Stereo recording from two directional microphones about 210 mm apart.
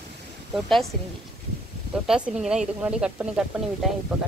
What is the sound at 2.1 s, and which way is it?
Speech, centre (ahead or behind).